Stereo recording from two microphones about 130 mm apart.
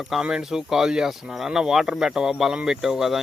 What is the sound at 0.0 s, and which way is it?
Speech, 5° right (ahead or behind).